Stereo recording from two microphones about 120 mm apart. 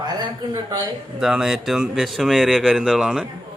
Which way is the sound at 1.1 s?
5° right (ahead or behind).